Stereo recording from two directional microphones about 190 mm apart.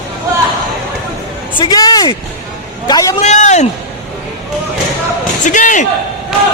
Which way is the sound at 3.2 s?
40° left (ahead or behind).